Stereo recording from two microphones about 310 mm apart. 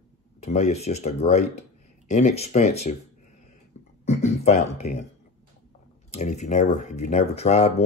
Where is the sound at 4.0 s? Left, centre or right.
Left.